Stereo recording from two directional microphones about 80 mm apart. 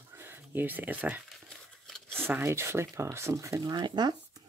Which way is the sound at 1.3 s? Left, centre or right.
Centre.